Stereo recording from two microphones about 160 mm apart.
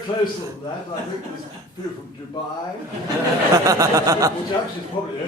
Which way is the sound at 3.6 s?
20° right (ahead or behind).